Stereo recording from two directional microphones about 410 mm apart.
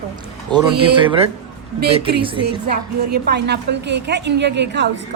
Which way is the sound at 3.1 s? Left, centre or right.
Right.